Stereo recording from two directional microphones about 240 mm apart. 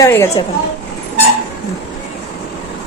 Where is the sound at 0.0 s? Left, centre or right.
Centre.